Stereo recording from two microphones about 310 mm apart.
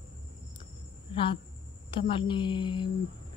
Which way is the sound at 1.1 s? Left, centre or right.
Centre.